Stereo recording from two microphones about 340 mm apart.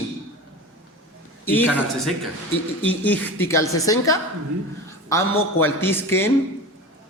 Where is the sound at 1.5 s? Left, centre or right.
Centre.